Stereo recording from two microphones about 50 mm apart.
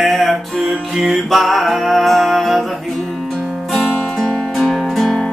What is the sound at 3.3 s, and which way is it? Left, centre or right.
Guitar, centre.